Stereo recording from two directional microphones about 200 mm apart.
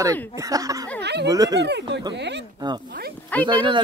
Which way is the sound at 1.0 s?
55° right (ahead or behind).